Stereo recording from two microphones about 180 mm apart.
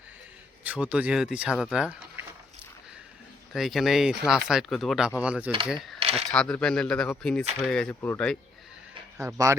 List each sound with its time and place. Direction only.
0.6 s speech: 10° right (ahead or behind)
3.5 s speech: centre (ahead or behind)
6.0 s a sound: 35° right (ahead or behind)
6.3 s speech: 5° left (ahead or behind)
9.1 s speech: 15° right (ahead or behind)